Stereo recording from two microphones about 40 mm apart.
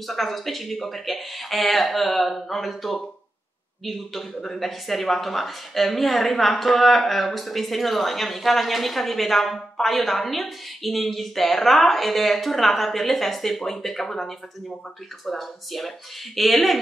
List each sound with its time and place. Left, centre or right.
0.0 s a woman's voice: centre